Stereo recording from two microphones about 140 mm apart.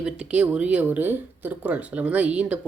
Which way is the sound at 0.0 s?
10° right (ahead or behind).